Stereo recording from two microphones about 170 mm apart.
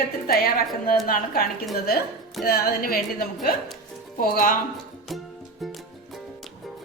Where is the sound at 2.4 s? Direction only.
60° left (ahead or behind).